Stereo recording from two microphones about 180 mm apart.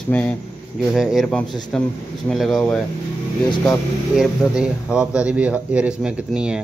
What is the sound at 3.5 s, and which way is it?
Speech, 15° left (ahead or behind).